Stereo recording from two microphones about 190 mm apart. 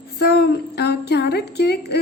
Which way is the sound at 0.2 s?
60° left (ahead or behind).